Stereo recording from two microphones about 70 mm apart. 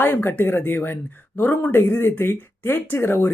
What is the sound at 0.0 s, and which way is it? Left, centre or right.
Speech, left.